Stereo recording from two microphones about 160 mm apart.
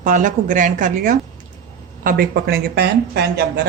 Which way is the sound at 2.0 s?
70° right (ahead or behind).